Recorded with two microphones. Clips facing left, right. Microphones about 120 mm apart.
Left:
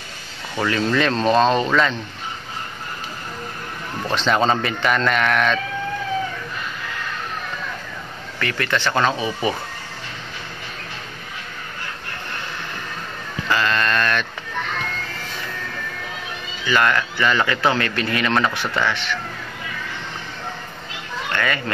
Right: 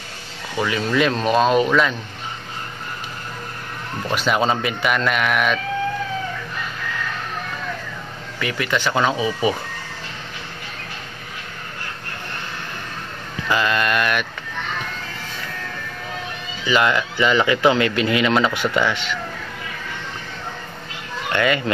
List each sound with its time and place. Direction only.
0.6 s speech: 5° right (ahead or behind)
4.1 s speech: 10° right (ahead or behind)
8.4 s speech: 15° right (ahead or behind)
13.5 s speech: 15° right (ahead or behind)
16.6 s speech: 15° right (ahead or behind)
21.3 s speech: 20° right (ahead or behind)